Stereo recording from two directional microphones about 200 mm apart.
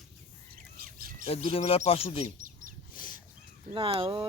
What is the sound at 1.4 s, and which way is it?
Speech, 30° left (ahead or behind).